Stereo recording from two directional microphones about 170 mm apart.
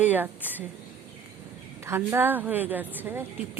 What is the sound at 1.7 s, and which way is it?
Speech, 15° right (ahead or behind).